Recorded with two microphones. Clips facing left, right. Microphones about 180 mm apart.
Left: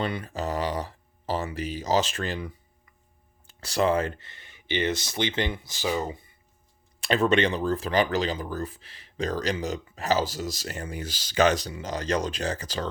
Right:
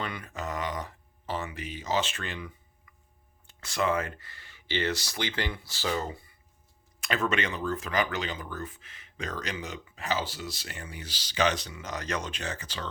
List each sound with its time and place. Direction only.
0.0 s speech: 30° left (ahead or behind)
7.0 s speech: 30° left (ahead or behind)